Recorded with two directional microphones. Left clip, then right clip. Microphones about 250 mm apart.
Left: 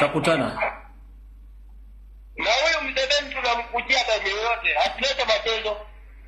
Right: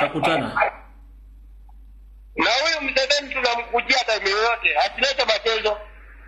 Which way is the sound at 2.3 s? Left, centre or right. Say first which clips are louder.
Right 1 dB; right.